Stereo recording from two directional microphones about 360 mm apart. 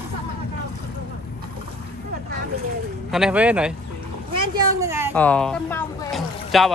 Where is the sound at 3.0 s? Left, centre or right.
Centre.